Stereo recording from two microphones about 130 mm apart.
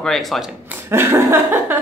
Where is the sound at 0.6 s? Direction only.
15° right (ahead or behind).